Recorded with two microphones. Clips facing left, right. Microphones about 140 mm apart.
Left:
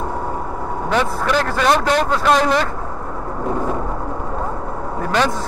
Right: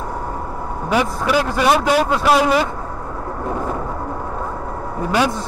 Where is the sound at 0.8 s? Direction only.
10° right (ahead or behind).